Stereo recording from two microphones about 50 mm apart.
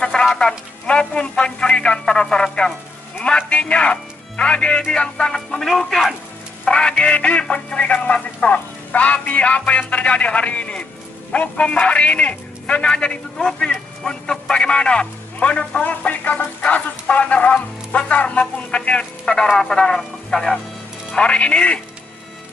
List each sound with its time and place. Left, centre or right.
0.0 s music: centre
3.3 s speech: left; by 6.1 s centre
6.6 s speech: centre
19.5 s music: centre
21.1 s speech: left